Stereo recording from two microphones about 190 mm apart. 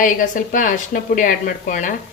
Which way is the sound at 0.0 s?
45° left (ahead or behind).